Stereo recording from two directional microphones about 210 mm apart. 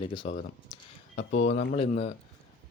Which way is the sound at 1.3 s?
60° left (ahead or behind).